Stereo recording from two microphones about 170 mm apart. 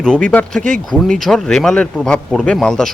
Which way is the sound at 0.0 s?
5° left (ahead or behind).